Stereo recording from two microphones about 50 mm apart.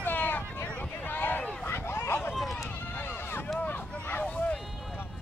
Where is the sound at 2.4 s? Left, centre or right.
Centre.